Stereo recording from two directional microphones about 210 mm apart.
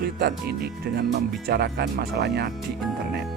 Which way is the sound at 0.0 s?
50° right (ahead or behind).